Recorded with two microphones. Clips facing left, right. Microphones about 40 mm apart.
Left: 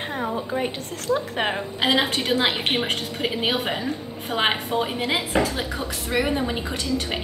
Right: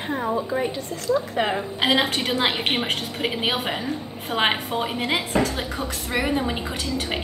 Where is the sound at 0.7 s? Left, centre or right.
Left.